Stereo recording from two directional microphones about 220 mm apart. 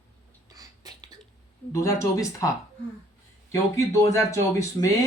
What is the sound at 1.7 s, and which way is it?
Speech, 15° left (ahead or behind).